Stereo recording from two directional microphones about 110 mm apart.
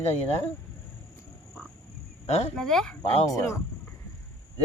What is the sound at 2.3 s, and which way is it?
Speech, 75° left (ahead or behind).